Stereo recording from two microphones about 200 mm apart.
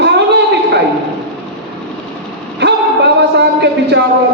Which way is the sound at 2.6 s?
55° right (ahead or behind).